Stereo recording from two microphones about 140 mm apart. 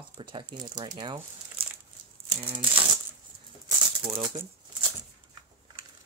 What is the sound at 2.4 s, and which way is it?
Speech, 35° right (ahead or behind).